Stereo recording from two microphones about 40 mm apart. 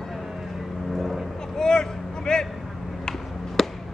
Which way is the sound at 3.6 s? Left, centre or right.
Centre.